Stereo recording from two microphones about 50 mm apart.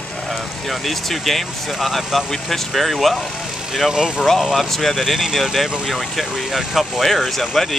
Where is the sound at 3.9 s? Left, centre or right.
Centre.